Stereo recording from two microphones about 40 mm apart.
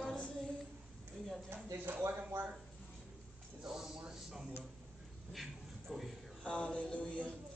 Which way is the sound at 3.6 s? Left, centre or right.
Centre.